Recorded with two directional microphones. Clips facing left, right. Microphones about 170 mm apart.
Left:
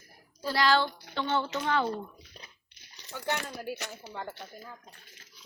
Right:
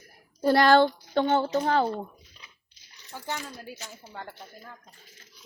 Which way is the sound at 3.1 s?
70° left (ahead or behind).